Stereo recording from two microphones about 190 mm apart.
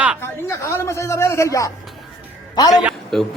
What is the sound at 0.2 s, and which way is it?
A man's voice, 15° left (ahead or behind).